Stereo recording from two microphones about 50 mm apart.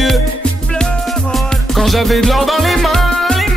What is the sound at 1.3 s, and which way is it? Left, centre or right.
Music, centre.